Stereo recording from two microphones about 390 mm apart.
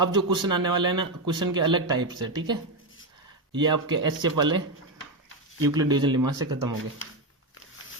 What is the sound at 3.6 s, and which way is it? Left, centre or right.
Speech, centre.